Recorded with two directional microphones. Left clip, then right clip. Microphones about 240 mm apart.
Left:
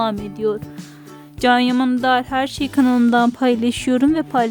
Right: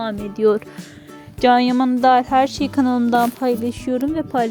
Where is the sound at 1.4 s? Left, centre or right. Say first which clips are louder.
Right 1 dB; centre.